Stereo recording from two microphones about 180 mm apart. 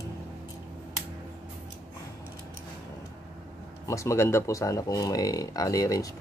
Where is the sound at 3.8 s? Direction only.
15° left (ahead or behind).